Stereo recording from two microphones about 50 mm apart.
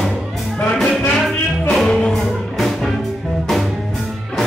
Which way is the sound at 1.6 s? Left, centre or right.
Centre.